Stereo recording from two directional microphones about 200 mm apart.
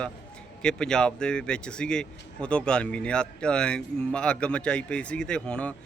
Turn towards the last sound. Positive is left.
turn(degrees=5)  # may be behind; listen again after turning